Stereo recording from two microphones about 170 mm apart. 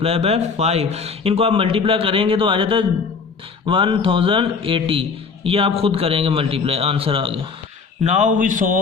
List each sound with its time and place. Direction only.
0.0 s a man's voice: 35° right (ahead or behind)
8.0 s a man's voice: 45° right (ahead or behind)